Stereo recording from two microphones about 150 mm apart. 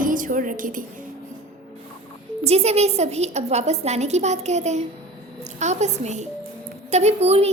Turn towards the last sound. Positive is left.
turn(degrees=-45)  # may be behind; listen again after turning